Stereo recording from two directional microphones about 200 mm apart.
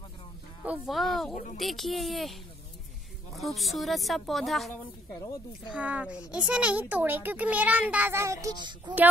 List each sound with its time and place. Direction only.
0.7 s speech: centre (ahead or behind)
1.3 s speech: 40° left (ahead or behind)
1.6 s speech: centre (ahead or behind)
3.3 s speech: centre (ahead or behind)
5.8 s a child's voice: 5° right (ahead or behind); by 8.9 s 20° right (ahead or behind)